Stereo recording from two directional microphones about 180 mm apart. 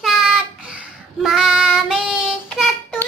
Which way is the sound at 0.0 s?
Centre (ahead or behind).